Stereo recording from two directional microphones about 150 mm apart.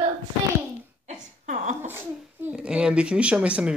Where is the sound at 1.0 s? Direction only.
55° right (ahead or behind).